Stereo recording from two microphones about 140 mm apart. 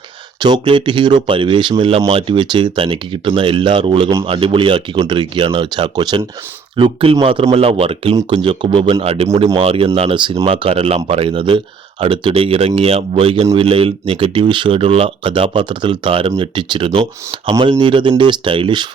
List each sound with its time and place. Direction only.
0.3 s speech: 30° right (ahead or behind)